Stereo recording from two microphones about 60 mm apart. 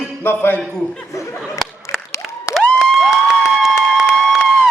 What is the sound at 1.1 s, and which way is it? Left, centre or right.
Speech, left.